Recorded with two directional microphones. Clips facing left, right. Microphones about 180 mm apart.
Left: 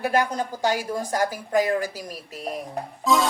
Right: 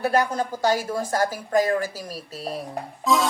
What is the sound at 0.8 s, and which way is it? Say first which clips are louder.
Speech: right 1 dB; 15° left (ahead or behind).